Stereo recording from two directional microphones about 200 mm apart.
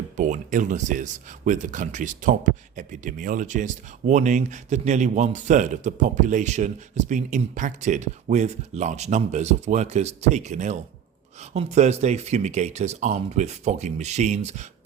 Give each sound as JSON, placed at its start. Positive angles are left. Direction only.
{"t": 0.2, "sound": "speech", "side_deg": -40}